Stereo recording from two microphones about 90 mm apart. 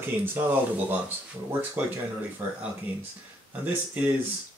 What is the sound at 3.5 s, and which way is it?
Speech, 20° right (ahead or behind).